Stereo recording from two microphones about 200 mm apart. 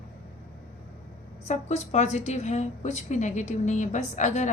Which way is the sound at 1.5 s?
35° left (ahead or behind).